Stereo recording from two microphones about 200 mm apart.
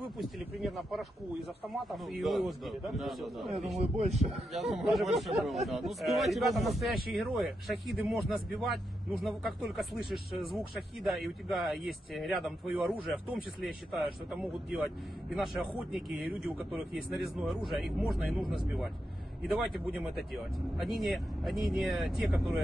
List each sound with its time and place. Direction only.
0.2 s speech: centre (ahead or behind)
3.8 s a man's voice: 30° right (ahead or behind)
4.6 s speech: centre (ahead or behind)